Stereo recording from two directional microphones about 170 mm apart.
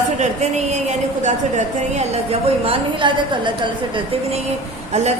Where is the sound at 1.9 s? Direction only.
40° right (ahead or behind).